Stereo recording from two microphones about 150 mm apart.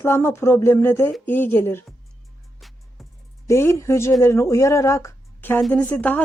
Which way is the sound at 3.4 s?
20° left (ahead or behind).